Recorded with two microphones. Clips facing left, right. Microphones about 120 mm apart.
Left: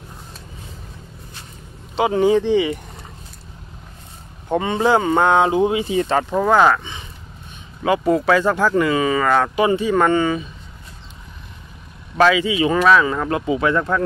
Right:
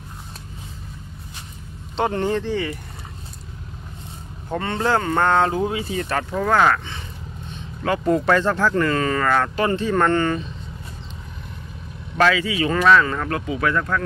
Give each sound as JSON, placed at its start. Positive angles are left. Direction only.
{"t": 2.0, "sound": "speech", "side_deg": 5}
{"t": 4.5, "sound": "speech", "side_deg": 15}
{"t": 12.2, "sound": "speech", "side_deg": 15}